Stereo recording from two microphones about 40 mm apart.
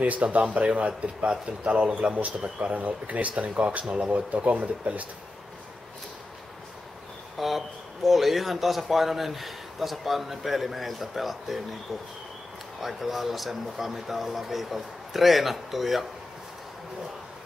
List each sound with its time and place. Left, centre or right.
0.0 s speech: right
0.4 s speech: right
7.3 s speech: centre
12.8 s speech: centre